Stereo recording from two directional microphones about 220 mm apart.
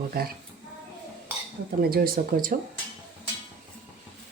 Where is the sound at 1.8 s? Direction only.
45° right (ahead or behind).